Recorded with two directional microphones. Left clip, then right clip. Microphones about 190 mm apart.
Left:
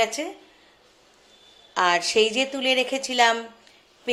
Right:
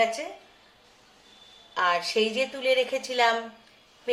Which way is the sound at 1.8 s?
50° left (ahead or behind).